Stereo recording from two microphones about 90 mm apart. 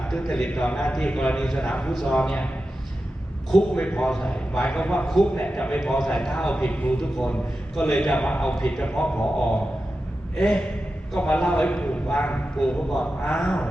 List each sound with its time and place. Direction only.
0.1 s a man's voice: 5° left (ahead or behind)
3.5 s a man's voice: 10° left (ahead or behind)